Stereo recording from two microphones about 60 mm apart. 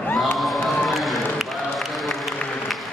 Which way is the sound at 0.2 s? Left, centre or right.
Centre.